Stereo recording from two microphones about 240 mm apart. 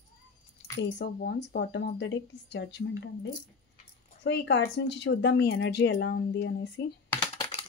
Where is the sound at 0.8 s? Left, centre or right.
Left.